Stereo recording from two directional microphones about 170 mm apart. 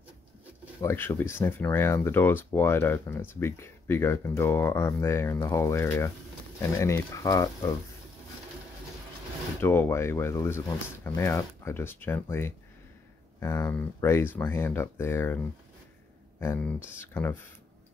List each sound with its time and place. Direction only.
0.8 s speech: 15° left (ahead or behind)
9.6 s speech: 15° left (ahead or behind)